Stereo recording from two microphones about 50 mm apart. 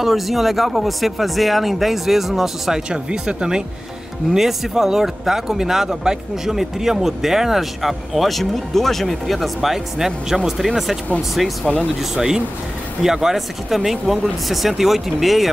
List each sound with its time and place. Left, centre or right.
0.0 s speech: centre
2.9 s speech: centre
12.0 s speech: centre